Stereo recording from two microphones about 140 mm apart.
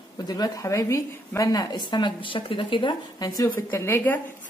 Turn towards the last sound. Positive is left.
turn(degrees=15)  # may be behind; listen again after turning